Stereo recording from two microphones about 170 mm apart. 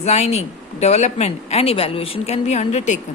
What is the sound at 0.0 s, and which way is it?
Speech, 40° left (ahead or behind).